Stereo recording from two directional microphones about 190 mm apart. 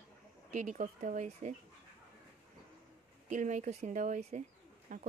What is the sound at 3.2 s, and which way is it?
Speech, 40° right (ahead or behind).